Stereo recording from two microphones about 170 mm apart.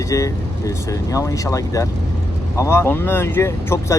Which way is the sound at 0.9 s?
20° left (ahead or behind).